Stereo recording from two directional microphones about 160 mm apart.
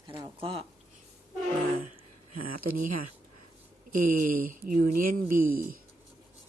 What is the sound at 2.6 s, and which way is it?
Speech, 60° right (ahead or behind).